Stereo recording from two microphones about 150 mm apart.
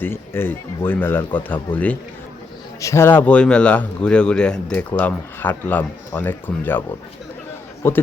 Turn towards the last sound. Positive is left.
turn(degrees=15)  # may be behind; listen again after turning